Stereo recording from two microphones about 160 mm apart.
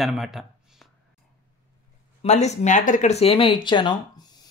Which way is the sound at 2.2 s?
45° left (ahead or behind).